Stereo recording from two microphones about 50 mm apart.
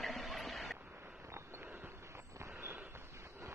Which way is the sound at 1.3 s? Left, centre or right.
Right.